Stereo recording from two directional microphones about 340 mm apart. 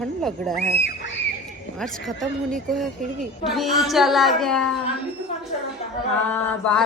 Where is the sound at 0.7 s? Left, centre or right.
Left.